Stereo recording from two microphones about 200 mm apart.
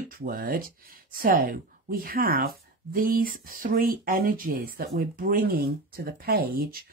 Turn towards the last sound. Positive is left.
turn(degrees=-50)  # may be behind; listen again after turning